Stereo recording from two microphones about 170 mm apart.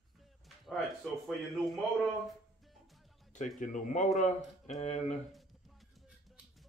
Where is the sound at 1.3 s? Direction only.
Centre (ahead or behind).